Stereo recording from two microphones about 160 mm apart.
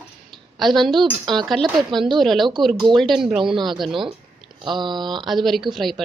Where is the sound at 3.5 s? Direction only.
30° right (ahead or behind).